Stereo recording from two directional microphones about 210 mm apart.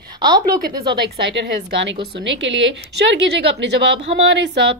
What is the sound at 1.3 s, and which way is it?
A woman's voice, 55° right (ahead or behind).